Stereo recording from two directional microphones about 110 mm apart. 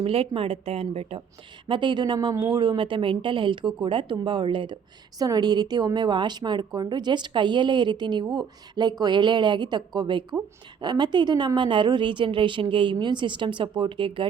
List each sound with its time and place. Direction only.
0.0 s a woman's voice: 60° right (ahead or behind)
1.6 s a woman's voice: 50° right (ahead or behind)
5.2 s a woman's voice: 35° right (ahead or behind)